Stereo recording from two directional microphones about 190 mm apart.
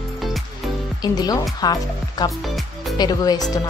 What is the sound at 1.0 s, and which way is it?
Speech, 20° left (ahead or behind).